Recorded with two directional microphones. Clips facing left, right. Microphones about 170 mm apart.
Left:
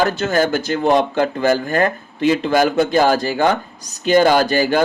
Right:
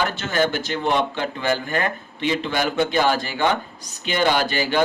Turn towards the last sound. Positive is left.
turn(degrees=45)  # may be behind; listen again after turning